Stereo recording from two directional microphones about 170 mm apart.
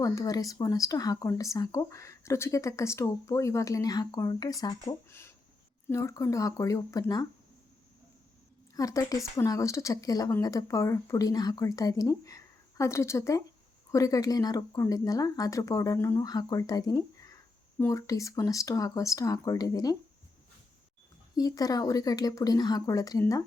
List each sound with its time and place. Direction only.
0.0 s speech: 20° left (ahead or behind)
8.7 s speech: 20° left (ahead or behind)
21.3 s speech: 20° left (ahead or behind)